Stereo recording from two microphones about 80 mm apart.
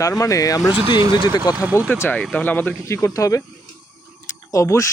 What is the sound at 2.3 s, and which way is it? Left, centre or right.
Speech, centre.